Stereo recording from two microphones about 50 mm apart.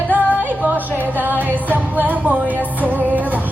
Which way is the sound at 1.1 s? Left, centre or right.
Right.